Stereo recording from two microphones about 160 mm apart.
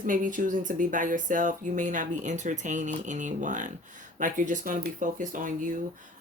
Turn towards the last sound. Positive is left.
turn(degrees=-55)  # may be behind; listen again after turning